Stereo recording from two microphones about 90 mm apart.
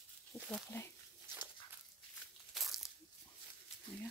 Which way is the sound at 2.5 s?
Centre (ahead or behind).